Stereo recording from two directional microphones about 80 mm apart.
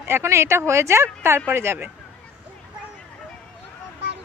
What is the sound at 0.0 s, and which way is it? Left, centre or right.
A woman's voice, right.